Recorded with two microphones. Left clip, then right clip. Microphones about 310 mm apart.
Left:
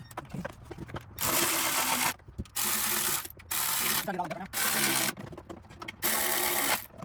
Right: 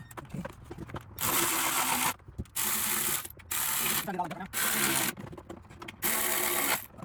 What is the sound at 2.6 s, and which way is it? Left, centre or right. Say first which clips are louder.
Ratchet: left 2 dB; centre.